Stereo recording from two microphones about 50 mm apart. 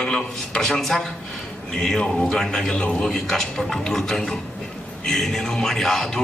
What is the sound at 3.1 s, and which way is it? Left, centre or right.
A man's voice, centre.